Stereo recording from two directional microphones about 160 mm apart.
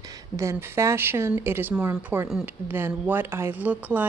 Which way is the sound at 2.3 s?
5° right (ahead or behind).